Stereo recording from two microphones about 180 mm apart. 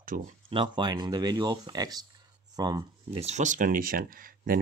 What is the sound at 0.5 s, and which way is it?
Speech, 25° right (ahead or behind).